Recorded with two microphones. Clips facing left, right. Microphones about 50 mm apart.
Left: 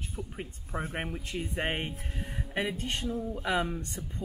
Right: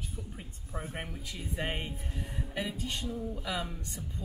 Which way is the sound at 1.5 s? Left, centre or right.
Left.